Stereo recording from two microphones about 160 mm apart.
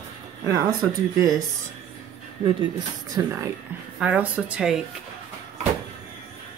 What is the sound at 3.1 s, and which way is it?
Speech, 20° right (ahead or behind).